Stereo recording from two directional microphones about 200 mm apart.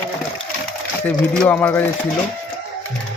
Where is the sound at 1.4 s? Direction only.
10° left (ahead or behind).